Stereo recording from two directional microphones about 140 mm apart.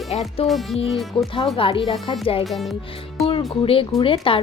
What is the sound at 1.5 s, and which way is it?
Speech, 40° left (ahead or behind).